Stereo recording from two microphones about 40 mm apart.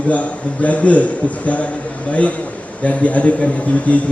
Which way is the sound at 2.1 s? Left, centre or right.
Left.